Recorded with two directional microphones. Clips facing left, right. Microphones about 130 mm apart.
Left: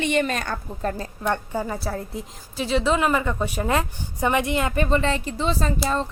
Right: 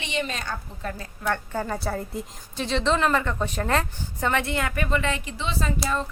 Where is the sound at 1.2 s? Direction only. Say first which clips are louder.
Left 2 dB; 15° left (ahead or behind).